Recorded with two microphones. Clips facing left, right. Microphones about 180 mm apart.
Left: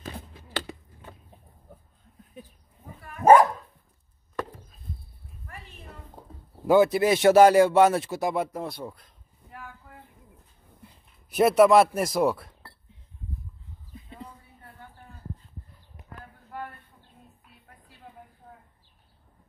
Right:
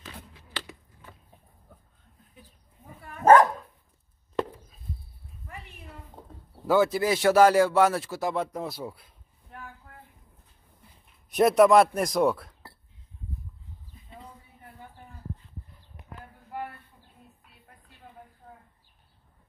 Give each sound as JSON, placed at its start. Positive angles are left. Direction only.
{"t": 0.0, "sound": "a sound", "side_deg": 40}
{"t": 3.3, "sound": "dog", "side_deg": 10}
{"t": 6.7, "sound": "speech", "side_deg": 20}
{"t": 11.2, "sound": "a man's voice", "side_deg": 0}